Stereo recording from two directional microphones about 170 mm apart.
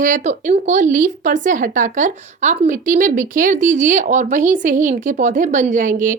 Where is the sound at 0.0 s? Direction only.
50° right (ahead or behind).